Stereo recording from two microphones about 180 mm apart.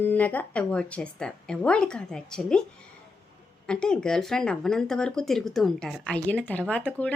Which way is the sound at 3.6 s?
5° left (ahead or behind).